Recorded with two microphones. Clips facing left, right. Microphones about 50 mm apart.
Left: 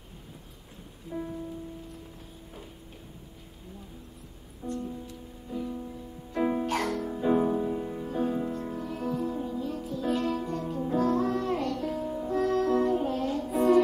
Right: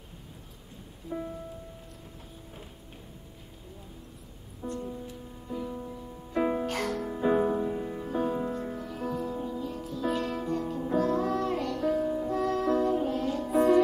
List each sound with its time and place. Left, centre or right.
1.1 s music: centre
4.6 s music: centre
5.6 s music: right
5.9 s music: centre
7.1 s music: centre
9.8 s music: centre